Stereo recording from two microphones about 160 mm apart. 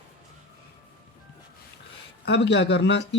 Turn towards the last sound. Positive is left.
turn(degrees=90)